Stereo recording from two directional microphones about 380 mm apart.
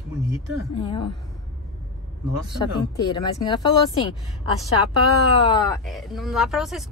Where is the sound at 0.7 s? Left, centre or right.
Centre.